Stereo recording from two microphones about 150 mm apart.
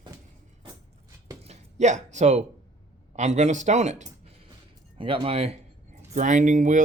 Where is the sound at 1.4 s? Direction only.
50° right (ahead or behind).